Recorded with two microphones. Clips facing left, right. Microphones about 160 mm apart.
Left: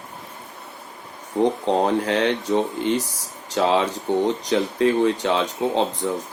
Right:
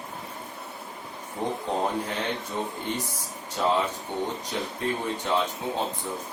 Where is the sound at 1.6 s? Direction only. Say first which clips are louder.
Left 8 dB; 85° left.